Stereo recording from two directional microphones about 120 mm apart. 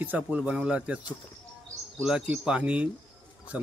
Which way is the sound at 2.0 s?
10° right (ahead or behind).